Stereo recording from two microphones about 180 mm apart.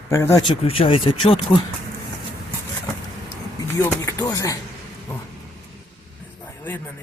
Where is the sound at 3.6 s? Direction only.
15° left (ahead or behind).